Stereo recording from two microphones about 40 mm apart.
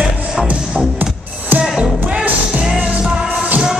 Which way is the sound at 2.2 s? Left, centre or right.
Right.